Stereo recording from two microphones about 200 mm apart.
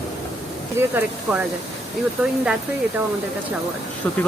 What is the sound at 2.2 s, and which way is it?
Speech, 10° right (ahead or behind).